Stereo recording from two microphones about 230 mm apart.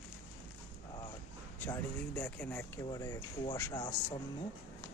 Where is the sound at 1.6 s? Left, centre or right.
Centre.